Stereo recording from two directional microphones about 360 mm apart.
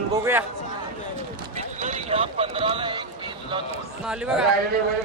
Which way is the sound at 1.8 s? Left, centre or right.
Centre.